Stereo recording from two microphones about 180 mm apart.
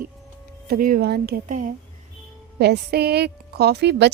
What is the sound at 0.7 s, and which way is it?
Speech, 50° right (ahead or behind).